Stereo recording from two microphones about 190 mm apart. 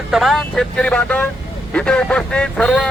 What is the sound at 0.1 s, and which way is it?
Speech, centre (ahead or behind).